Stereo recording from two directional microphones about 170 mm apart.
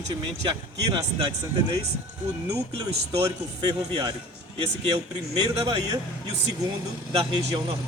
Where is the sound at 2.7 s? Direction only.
30° right (ahead or behind).